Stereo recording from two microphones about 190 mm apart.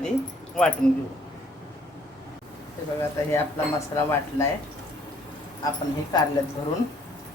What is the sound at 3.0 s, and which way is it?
Speech, 10° left (ahead or behind).